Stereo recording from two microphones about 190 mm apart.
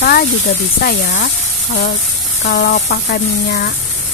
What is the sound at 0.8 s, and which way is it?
Speech, 55° left (ahead or behind).